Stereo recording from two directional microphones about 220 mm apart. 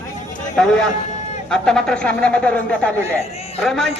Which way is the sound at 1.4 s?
5° left (ahead or behind).